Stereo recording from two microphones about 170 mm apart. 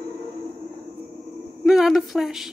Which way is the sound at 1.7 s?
Centre (ahead or behind).